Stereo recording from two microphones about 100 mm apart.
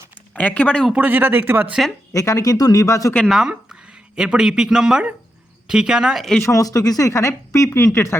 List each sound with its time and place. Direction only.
0.3 s speech: 15° left (ahead or behind)
0.9 s speech: 20° right (ahead or behind)
2.1 s speech: 35° left (ahead or behind)
3.2 s speech: 5° right (ahead or behind)
6.4 s speech: 35° left (ahead or behind)